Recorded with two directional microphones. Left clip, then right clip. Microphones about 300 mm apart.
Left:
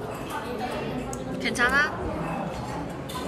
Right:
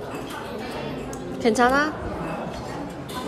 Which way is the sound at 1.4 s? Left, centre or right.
Centre.